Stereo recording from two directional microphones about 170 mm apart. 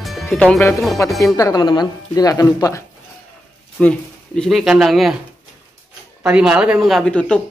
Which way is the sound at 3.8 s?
5° left (ahead or behind).